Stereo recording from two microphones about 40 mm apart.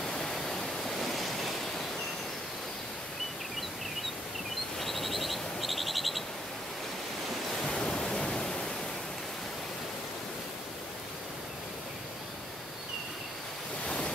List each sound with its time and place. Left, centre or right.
0.0 s pink noise: centre
4.7 s a sound: centre
7.6 s pink noise: centre